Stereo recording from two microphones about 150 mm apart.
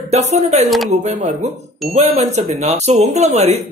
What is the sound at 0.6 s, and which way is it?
Speech, centre (ahead or behind).